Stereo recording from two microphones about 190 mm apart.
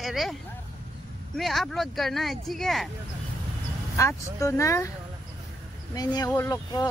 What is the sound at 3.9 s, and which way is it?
Speech, 15° left (ahead or behind).